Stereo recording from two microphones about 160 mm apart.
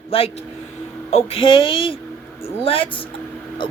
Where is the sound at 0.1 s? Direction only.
35° left (ahead or behind).